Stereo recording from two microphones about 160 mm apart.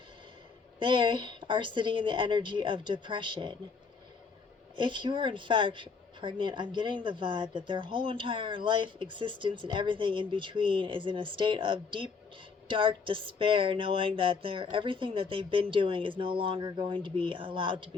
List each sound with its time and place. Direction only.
0.8 s a woman's voice: 30° right (ahead or behind)
4.8 s a woman's voice: 30° right (ahead or behind)